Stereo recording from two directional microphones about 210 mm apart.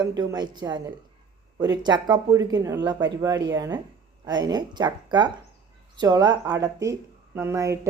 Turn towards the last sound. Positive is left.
turn(degrees=-15)  # may be behind; listen again after turning